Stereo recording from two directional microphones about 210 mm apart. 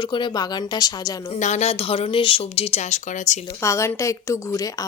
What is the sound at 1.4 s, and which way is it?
Speech, 35° left (ahead or behind).